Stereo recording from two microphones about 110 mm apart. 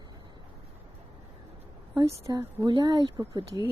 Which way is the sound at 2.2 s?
30° right (ahead or behind).